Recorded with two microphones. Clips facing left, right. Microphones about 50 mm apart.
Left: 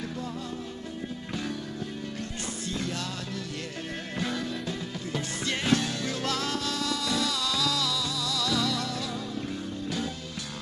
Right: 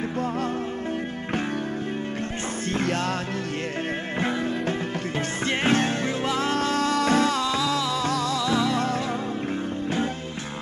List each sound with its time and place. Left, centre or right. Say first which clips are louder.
2.7 s music: right 8 dB; right
4.2 s music: right 5 dB; right
6.2 s music: right 5 dB; right
6.5 s music: right 8 dB; right
8.4 s music: right 2 dB; right